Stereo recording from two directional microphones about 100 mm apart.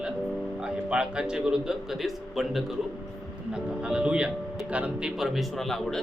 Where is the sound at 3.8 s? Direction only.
10° right (ahead or behind).